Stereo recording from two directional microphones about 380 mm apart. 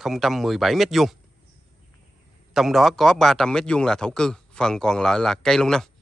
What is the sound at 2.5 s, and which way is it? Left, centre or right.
A man's voice, centre.